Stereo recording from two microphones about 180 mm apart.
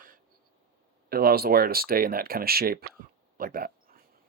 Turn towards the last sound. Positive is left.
turn(degrees=-50)  # may be behind; listen again after turning